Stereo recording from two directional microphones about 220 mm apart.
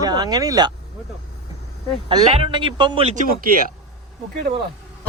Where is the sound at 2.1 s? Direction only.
25° right (ahead or behind).